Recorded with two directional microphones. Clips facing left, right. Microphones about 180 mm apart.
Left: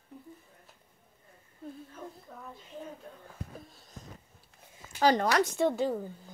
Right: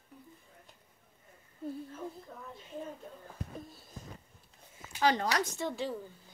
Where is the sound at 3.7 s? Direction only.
5° right (ahead or behind).